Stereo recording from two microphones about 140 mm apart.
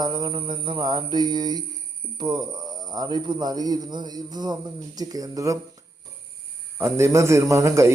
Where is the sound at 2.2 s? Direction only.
30° right (ahead or behind).